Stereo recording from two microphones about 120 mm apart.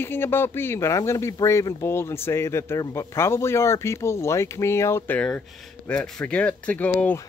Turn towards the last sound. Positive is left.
turn(degrees=10)  # may be behind; listen again after turning